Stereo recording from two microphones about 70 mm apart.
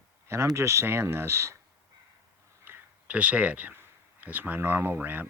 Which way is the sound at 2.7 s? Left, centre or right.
Right.